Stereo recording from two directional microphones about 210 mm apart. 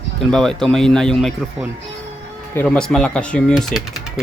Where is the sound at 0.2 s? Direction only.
Centre (ahead or behind).